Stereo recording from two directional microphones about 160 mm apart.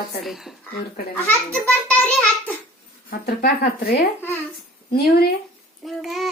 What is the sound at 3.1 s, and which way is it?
Speech, 70° left (ahead or behind).